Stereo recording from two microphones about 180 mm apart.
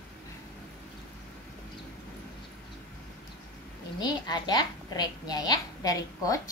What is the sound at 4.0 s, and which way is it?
A woman's voice, 25° left (ahead or behind).